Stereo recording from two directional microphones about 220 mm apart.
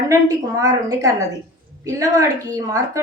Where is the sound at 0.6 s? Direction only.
15° right (ahead or behind).